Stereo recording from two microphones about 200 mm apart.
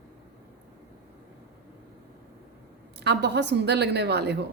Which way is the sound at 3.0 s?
55° right (ahead or behind).